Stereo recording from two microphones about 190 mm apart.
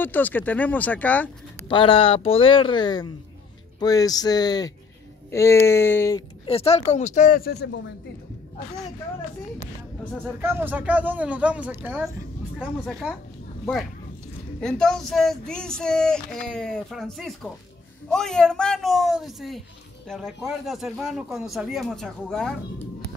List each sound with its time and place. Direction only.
0.0 s speech: 10° left (ahead or behind)
1.7 s speech: 25° left (ahead or behind)
6.4 s speech: 30° left (ahead or behind); by 7.8 s 55° left (ahead or behind)
10.4 s speech: 10° right (ahead or behind)
14.6 s speech: centre (ahead or behind)